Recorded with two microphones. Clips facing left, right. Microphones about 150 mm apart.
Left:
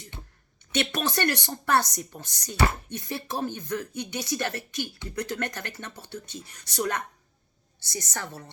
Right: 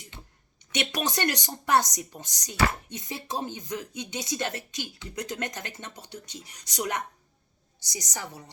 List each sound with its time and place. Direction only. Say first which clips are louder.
0.7 s speech: left 2 dB; 15° right (ahead or behind)